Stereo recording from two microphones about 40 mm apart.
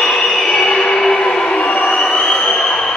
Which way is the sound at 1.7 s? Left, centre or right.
Left.